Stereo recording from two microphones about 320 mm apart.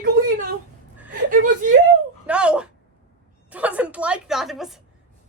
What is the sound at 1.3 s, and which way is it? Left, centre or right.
Speech, right.